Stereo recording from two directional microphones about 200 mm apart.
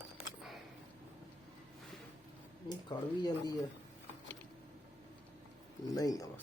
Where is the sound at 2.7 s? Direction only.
20° left (ahead or behind).